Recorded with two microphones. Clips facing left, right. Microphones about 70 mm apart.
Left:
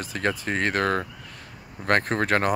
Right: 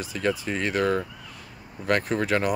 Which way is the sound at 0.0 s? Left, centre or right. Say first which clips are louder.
Even; left.